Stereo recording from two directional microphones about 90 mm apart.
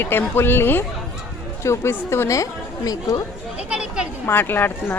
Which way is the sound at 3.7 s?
10° right (ahead or behind).